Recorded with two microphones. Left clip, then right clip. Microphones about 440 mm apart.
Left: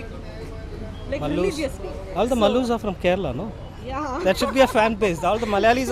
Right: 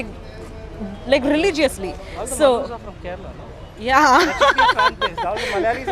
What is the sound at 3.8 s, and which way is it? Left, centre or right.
Speech, right.